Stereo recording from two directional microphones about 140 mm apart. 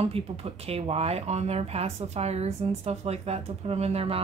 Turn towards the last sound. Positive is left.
turn(degrees=-45)  # may be behind; listen again after turning